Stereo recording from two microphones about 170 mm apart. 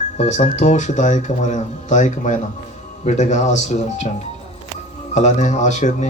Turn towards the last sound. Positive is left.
turn(degrees=45)  # may be behind; listen again after turning